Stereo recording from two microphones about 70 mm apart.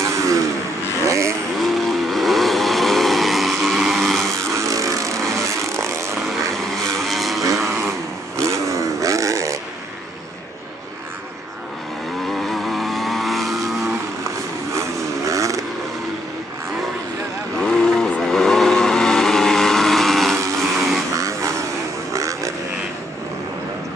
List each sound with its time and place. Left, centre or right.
0.0 s vehicle: right
1.6 s vehicle: centre
4.3 s vehicle: right
7.0 s vehicle: centre
8.4 s vehicle: right
12.3 s vehicle: centre
14.7 s vehicle: right
17.6 s vehicle: centre
21.1 s a sound: right